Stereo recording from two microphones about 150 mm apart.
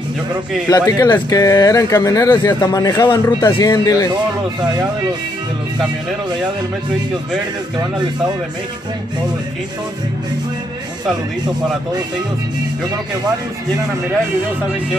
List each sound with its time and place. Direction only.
0.7 s speech: 20° left (ahead or behind)